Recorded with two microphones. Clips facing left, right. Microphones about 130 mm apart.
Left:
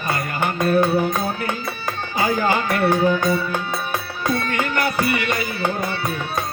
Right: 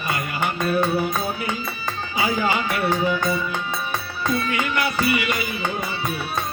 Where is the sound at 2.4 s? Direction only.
40° left (ahead or behind).